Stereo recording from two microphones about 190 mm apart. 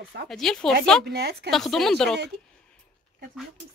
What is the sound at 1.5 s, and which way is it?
Speech, centre (ahead or behind).